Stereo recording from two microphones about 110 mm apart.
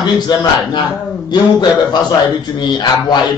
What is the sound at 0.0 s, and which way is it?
A man's voice, 35° left (ahead or behind).